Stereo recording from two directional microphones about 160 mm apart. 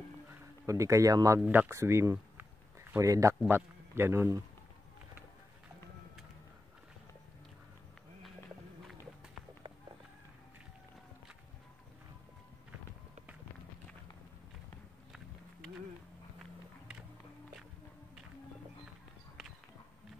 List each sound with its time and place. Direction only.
0.3 s a man's voice: 20° right (ahead or behind)